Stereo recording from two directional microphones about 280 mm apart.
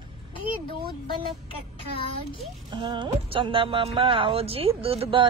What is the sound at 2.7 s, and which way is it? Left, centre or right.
A woman's voice, centre.